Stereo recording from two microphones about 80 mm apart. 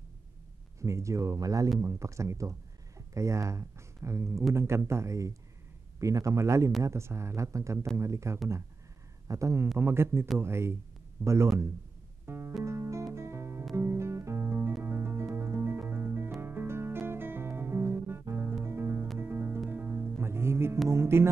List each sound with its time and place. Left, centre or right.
0.7 s speech: right
12.3 s music: right
13.1 s guitar: right
14.8 s music: right
20.9 s speech: right